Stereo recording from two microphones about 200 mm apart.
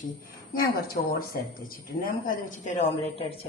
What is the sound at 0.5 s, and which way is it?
Speech, 45° left (ahead or behind).